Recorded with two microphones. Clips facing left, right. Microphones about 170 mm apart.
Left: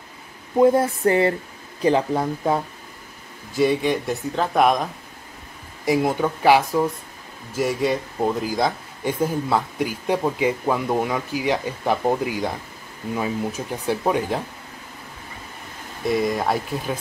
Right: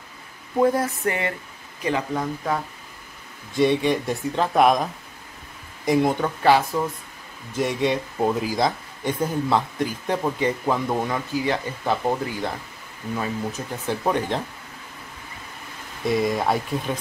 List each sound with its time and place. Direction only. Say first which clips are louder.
0.6 s speech: left 4 dB; 25° left (ahead or behind)
3.5 s speech: even; centre (ahead or behind)
5.9 s speech: even; 5° left (ahead or behind)
16.1 s speech: even; centre (ahead or behind)